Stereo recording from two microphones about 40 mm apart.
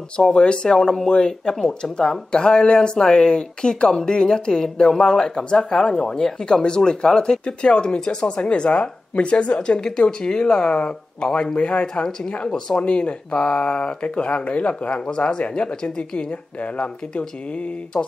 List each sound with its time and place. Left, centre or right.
0.2 s speech: left
16.7 s speech: left